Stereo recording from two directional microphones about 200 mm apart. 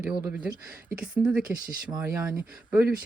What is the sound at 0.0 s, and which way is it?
Speech, 5° right (ahead or behind).